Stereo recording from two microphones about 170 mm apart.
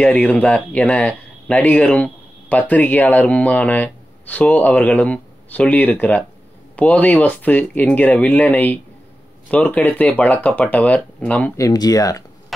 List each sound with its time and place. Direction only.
0.0 s speech: 5° left (ahead or behind)
11.6 s speech: 20° left (ahead or behind)